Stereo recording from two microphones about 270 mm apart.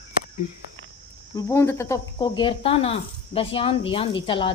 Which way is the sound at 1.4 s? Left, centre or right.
Centre.